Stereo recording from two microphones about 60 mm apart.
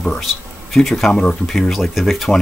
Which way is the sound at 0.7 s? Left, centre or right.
Centre.